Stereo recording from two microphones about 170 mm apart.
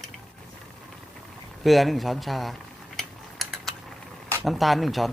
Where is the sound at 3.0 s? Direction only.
Centre (ahead or behind).